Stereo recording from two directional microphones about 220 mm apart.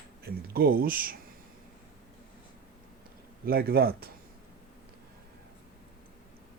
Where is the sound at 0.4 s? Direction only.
45° right (ahead or behind).